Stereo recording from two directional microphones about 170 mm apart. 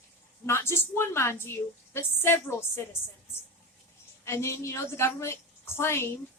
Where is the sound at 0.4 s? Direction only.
15° left (ahead or behind).